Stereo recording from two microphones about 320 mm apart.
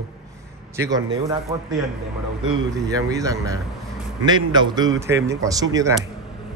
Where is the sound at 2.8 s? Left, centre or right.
Centre.